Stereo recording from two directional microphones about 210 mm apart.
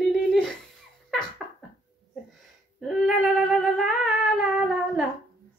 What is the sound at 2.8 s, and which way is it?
Humming, centre (ahead or behind).